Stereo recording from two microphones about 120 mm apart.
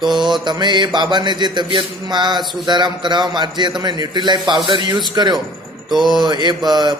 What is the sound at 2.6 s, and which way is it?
A man's voice, 35° right (ahead or behind).